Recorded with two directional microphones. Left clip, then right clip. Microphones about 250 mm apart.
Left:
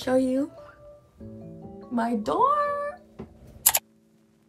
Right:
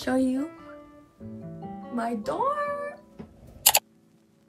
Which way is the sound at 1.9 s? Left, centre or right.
Centre.